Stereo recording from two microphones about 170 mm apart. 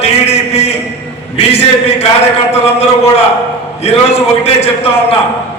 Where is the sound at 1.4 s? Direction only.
35° left (ahead or behind).